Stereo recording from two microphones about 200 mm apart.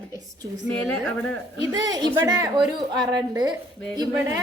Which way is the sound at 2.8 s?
20° right (ahead or behind).